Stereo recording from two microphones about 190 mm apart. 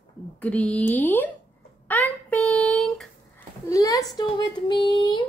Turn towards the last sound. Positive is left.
turn(degrees=25)  # may be behind; listen again after turning